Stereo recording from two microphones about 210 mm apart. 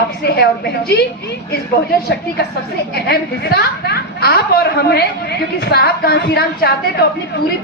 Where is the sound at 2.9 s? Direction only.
50° left (ahead or behind).